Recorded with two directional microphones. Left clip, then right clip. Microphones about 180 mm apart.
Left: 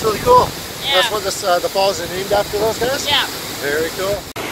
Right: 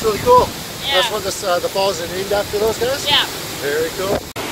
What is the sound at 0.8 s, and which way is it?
Speech, 50° right (ahead or behind).